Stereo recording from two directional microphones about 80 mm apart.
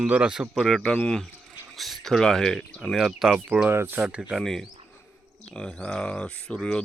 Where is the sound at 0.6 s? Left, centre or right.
Centre.